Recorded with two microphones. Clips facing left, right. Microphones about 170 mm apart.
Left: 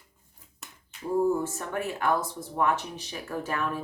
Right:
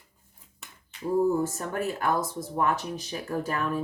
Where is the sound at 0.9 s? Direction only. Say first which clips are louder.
Right 4 dB; centre (ahead or behind).